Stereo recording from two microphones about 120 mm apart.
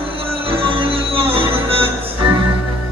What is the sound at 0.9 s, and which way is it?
Music, 50° right (ahead or behind).